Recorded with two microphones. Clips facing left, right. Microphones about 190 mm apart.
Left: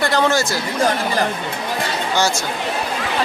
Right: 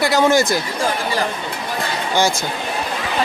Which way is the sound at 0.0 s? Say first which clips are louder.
Right 3 dB; 10° right (ahead or behind).